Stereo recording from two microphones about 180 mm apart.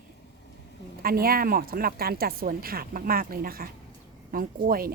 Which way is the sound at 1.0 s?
55° right (ahead or behind).